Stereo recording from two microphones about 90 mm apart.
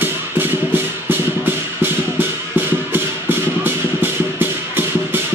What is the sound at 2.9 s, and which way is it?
Music, 25° right (ahead or behind).